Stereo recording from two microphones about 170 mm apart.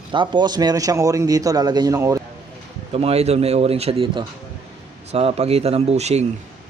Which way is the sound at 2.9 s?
35° right (ahead or behind).